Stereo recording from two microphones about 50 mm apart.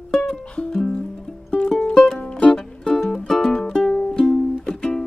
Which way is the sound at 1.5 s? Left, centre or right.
Left.